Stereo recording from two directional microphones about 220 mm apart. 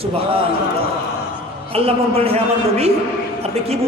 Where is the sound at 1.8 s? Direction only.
25° right (ahead or behind).